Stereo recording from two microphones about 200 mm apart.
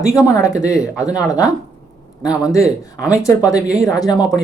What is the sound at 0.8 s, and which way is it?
Speech, 5° right (ahead or behind).